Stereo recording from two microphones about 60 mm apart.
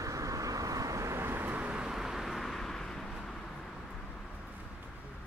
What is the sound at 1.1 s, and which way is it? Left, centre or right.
Vehicle, right.